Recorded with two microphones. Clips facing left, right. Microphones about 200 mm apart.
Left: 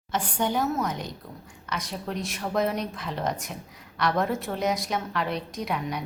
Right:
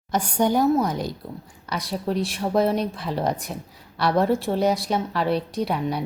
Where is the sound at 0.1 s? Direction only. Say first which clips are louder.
Right 6 dB; 40° right (ahead or behind).